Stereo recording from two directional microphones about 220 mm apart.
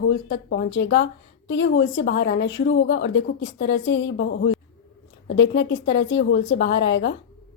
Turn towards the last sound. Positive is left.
turn(degrees=55)  # may be behind; listen again after turning